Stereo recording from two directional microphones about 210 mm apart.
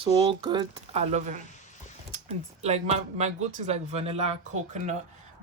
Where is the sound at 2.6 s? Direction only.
30° right (ahead or behind).